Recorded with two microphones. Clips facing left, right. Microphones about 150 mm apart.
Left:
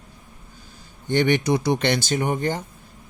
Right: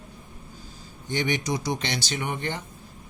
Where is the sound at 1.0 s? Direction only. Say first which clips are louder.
Left 7 dB; 60° left (ahead or behind); by 2.6 s 40° left (ahead or behind).